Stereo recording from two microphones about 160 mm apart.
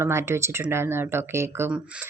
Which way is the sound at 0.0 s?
15° right (ahead or behind).